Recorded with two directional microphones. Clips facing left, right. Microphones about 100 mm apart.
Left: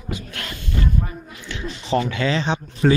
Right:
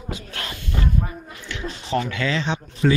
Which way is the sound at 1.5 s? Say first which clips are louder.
Left 2 dB; 20° left (ahead or behind).